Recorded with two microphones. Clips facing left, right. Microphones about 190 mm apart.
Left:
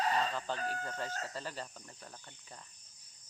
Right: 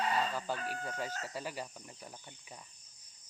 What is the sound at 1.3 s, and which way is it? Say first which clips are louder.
Cricket: right 2 dB; 10° right (ahead or behind).